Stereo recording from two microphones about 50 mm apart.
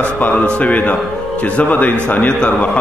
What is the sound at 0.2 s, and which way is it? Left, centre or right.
A man's voice, left.